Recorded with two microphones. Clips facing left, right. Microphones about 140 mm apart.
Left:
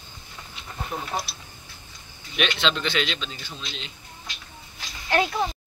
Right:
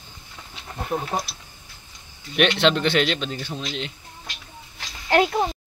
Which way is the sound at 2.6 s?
60° right (ahead or behind).